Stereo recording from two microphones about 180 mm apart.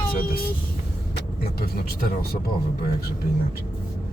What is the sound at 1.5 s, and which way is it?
Speech, 60° left (ahead or behind).